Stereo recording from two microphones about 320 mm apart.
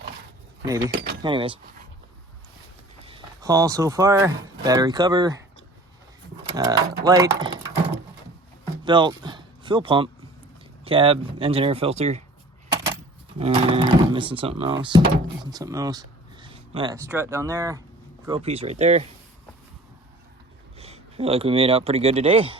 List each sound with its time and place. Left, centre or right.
0.6 s speech: centre
0.9 s speech: right
1.2 s speech: centre
3.0 s speech: centre
6.6 s speech: centre
8.8 s speech: centre
13.4 s speech: centre
20.7 s speech: centre